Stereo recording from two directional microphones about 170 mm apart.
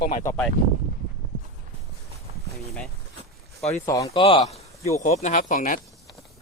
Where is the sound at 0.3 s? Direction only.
10° left (ahead or behind).